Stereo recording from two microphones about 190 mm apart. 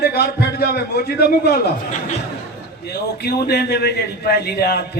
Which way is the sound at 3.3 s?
55° left (ahead or behind).